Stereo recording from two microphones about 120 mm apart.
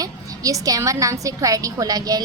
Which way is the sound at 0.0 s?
30° right (ahead or behind).